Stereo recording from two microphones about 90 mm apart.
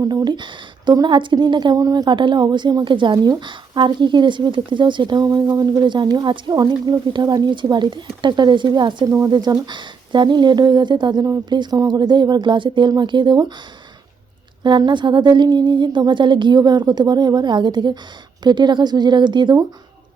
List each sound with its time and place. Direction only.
0.0 s a woman's voice: 45° right (ahead or behind)
2.1 s a woman's voice: 60° right (ahead or behind)
9.0 s speech: 35° right (ahead or behind)
9.3 s a woman's voice: 55° right (ahead or behind)
14.6 s a woman's voice: 55° right (ahead or behind)